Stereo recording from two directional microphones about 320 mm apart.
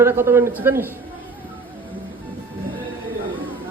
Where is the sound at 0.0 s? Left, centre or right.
Centre.